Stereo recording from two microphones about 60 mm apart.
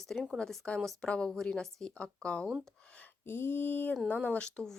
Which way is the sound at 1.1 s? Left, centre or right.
Centre.